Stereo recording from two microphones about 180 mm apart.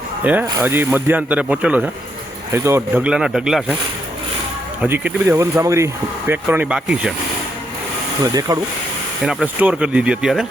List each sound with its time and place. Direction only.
0.3 s speech: 10° right (ahead or behind)
4.8 s speech: 10° right (ahead or behind)
8.2 s speech: 20° right (ahead or behind)
9.2 s speech: 5° right (ahead or behind)